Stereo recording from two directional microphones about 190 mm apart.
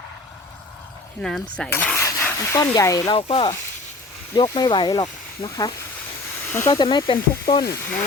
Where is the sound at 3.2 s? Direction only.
30° left (ahead or behind); by 6.8 s 10° left (ahead or behind).